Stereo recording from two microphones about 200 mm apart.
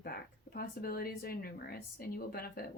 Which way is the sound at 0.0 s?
50° left (ahead or behind).